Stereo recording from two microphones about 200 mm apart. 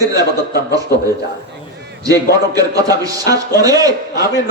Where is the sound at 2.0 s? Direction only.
20° right (ahead or behind).